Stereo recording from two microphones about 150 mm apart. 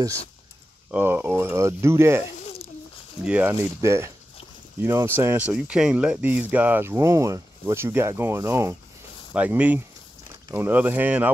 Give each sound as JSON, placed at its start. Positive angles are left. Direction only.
{"t": 0.9, "sound": "speech", "side_deg": -15}
{"t": 2.4, "sound": "a sound", "side_deg": 40}
{"t": 3.3, "sound": "speech", "side_deg": -10}